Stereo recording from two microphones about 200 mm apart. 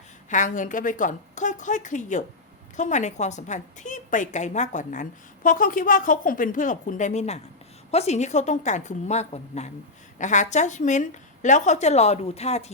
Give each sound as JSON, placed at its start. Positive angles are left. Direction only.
{"t": 0.3, "sound": "a woman's voice", "side_deg": 40}